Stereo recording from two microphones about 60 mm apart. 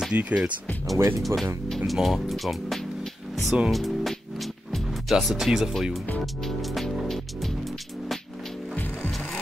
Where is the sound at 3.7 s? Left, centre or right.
Centre.